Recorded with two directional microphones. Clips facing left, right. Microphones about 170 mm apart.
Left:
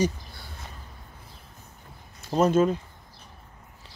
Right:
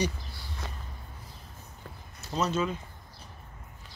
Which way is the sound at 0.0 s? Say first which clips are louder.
Left 5 dB; 50° left (ahead or behind).